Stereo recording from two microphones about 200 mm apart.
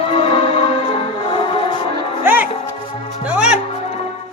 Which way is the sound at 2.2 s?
10° right (ahead or behind).